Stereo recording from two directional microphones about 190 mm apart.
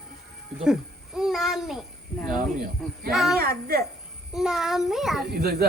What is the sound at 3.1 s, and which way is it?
Speech, centre (ahead or behind).